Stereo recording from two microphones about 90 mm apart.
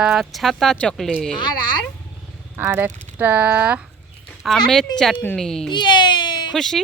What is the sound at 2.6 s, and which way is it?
Speech, 30° right (ahead or behind).